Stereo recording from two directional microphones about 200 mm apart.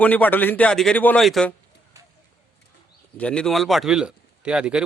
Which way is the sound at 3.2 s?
5° left (ahead or behind).